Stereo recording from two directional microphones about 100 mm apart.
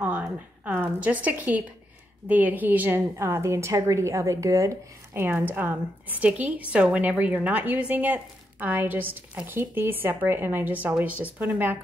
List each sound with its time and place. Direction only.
0.7 s a woman's voice: 15° right (ahead or behind)
5.5 s a woman's voice: 20° right (ahead or behind)